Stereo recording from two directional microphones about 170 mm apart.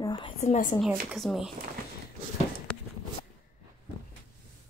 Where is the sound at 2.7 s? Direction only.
5° left (ahead or behind).